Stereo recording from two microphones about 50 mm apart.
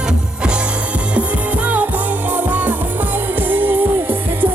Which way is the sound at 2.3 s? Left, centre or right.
Right.